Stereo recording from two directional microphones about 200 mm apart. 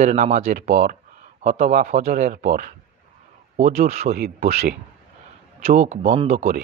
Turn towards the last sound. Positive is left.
turn(degrees=-35)  # may be behind; listen again after turning